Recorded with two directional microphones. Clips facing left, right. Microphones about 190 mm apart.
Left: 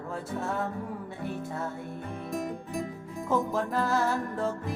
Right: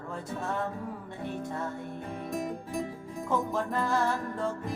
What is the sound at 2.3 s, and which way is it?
Music, centre (ahead or behind).